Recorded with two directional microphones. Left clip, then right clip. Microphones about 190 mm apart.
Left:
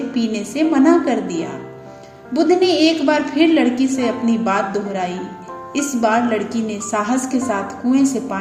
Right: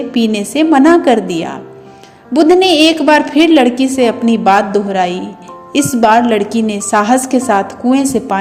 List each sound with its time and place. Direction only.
0.1 s a woman's voice: 50° right (ahead or behind)